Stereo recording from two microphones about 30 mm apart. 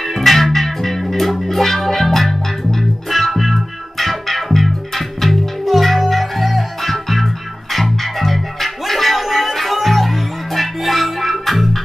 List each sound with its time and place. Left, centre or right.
0.0 s music: centre